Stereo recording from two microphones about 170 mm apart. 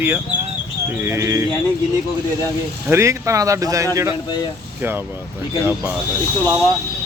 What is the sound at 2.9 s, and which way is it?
Speech, 15° right (ahead or behind).